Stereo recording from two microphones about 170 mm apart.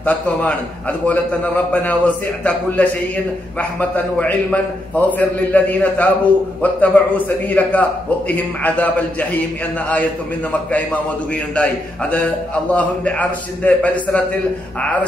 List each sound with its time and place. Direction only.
0.0 s a man's voice: 10° left (ahead or behind)